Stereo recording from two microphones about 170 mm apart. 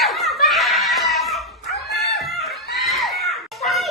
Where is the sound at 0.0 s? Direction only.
Centre (ahead or behind).